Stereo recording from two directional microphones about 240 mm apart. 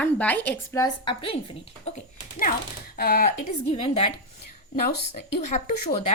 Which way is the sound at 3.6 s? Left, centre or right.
Left.